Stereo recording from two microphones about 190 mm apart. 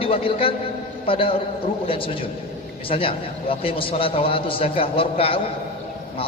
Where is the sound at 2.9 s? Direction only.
30° left (ahead or behind).